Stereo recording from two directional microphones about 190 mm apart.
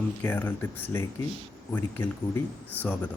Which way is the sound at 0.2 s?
10° left (ahead or behind).